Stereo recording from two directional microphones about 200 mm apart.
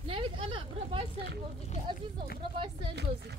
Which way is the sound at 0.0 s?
25° right (ahead or behind).